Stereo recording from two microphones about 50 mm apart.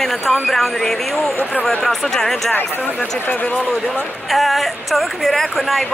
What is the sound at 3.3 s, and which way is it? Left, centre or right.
Speech, left.